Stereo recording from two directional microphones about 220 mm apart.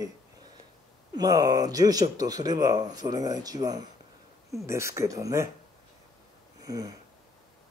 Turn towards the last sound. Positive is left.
turn(degrees=-15)  # may be behind; listen again after turning